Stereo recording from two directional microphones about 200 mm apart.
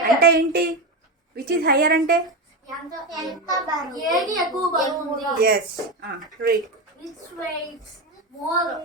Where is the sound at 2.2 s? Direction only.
Centre (ahead or behind).